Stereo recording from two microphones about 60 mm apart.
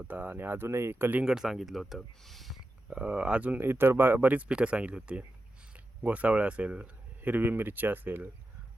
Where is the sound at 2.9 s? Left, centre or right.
Centre.